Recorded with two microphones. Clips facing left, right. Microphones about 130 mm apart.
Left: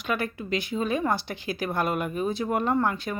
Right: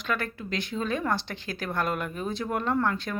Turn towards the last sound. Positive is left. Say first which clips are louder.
# left 2 dB
turn(degrees=10)  # may be behind; listen again after turning